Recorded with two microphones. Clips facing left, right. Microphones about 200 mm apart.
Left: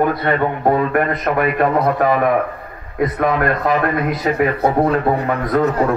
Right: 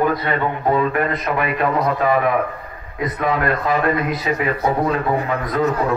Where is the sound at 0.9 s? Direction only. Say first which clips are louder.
Left 3 dB; 50° left (ahead or behind).